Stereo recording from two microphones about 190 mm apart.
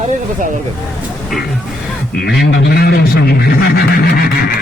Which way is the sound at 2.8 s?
55° left (ahead or behind).